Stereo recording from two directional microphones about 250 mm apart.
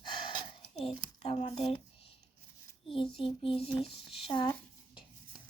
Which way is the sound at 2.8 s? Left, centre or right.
Left.